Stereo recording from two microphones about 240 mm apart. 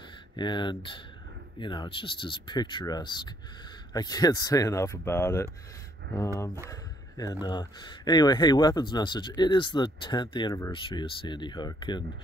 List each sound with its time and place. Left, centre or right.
0.4 s speech: centre
6.7 s a sound: centre
7.4 s speech: centre